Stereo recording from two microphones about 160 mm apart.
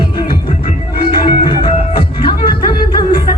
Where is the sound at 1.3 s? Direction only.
30° left (ahead or behind).